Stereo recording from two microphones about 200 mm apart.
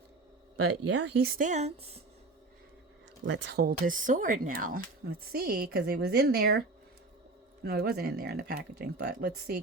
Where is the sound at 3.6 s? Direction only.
40° right (ahead or behind).